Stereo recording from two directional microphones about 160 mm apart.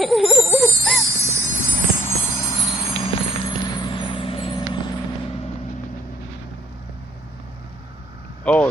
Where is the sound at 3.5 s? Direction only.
30° left (ahead or behind).